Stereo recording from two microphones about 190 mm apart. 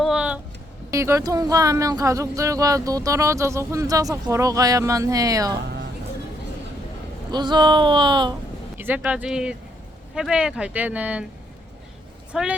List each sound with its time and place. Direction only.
0.0 s music: 5° right (ahead or behind)
0.9 s speech: 15° right (ahead or behind)
7.3 s speech: 25° right (ahead or behind)
8.8 s speech: 10° right (ahead or behind)
12.3 s speech: 5° right (ahead or behind)